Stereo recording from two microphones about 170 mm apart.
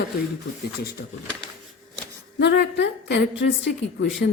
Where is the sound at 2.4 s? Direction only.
85° left.